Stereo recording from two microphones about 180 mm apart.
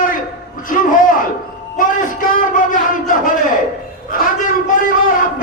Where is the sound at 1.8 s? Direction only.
50° left (ahead or behind).